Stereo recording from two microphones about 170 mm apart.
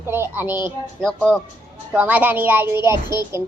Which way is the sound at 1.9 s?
10° right (ahead or behind).